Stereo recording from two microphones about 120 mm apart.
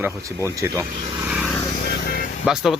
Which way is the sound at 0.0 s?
25° right (ahead or behind).